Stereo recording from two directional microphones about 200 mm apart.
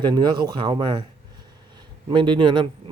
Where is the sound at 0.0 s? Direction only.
20° right (ahead or behind).